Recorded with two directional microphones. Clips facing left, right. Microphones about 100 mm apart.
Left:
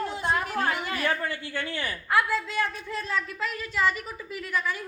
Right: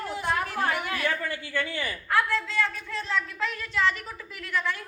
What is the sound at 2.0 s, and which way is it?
A man's voice, 10° left (ahead or behind).